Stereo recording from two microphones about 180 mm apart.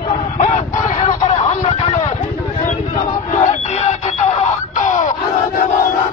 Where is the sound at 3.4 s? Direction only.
40° left (ahead or behind).